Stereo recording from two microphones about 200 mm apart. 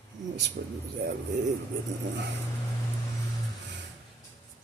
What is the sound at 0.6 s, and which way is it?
Speech, 50° right (ahead or behind).